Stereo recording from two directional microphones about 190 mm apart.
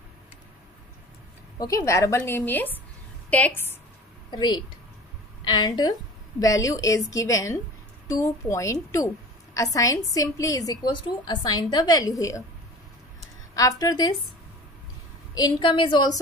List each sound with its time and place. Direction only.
1.6 s a woman's voice: 15° left (ahead or behind)
4.3 s a woman's voice: 25° left (ahead or behind)
13.6 s a woman's voice: 20° left (ahead or behind)
15.3 s a woman's voice: 20° left (ahead or behind)